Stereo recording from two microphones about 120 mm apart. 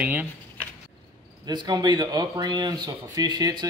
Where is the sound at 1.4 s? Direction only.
35° right (ahead or behind).